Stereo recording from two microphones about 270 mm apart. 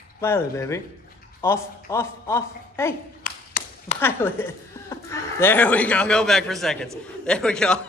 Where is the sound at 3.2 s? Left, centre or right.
Left.